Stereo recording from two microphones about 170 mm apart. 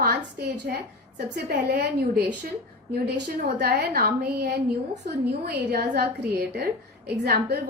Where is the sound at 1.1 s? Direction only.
65° right (ahead or behind).